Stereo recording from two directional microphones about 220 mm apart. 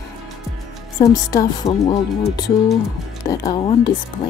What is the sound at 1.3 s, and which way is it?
Speech, 20° left (ahead or behind).